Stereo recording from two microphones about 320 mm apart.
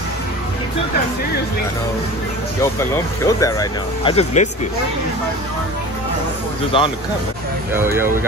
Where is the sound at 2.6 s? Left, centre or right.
Centre.